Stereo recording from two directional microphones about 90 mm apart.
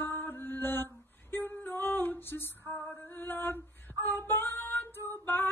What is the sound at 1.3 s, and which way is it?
Music, 20° left (ahead or behind).